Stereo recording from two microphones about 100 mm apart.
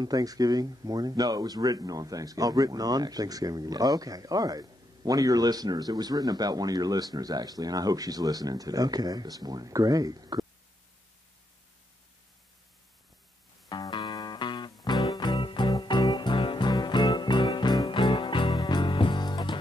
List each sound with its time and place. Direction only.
0.0 s speech: 40° right (ahead or behind)
13.7 s music: 50° left (ahead or behind)